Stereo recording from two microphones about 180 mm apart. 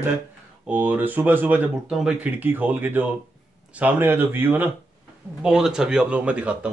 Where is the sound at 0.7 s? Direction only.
10° right (ahead or behind).